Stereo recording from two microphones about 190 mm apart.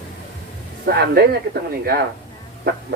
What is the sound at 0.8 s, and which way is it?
Speech, 60° right (ahead or behind).